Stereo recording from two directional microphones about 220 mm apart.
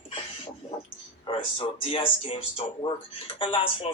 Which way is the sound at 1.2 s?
25° left (ahead or behind).